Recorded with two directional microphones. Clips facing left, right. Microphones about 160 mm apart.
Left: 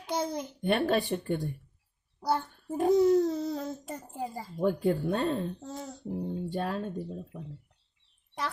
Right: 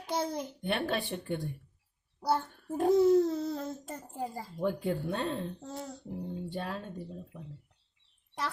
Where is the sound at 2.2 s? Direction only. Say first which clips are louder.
Left 1 dB; centre (ahead or behind).